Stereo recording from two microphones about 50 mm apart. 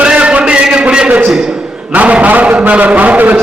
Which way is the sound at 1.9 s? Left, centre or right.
Right.